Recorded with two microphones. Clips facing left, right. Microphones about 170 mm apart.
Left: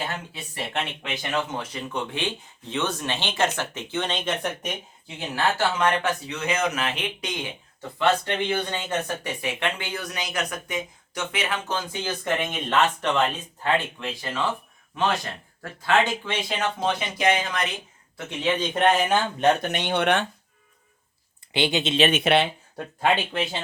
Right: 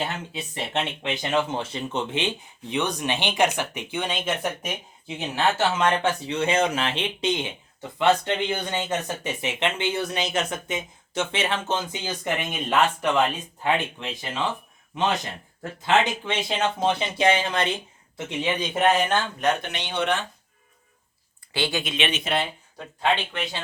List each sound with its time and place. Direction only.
0.3 s speech: 20° right (ahead or behind)
5.0 s speech: 20° right (ahead or behind)
18.4 s speech: 10° right (ahead or behind); by 19.2 s 5° left (ahead or behind)
19.6 s speech: 50° left (ahead or behind)
21.5 s speech: 20° left (ahead or behind)
22.1 s speech: 70° left (ahead or behind)